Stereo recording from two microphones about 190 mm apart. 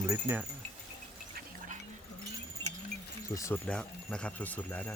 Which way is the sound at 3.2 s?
15° left (ahead or behind).